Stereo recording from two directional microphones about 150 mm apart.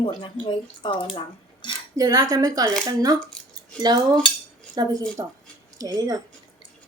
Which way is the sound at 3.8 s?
25° right (ahead or behind).